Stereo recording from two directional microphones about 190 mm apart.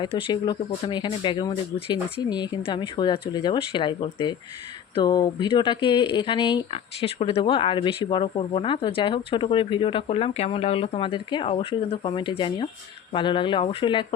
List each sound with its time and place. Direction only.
0.0 s speech: 25° left (ahead or behind)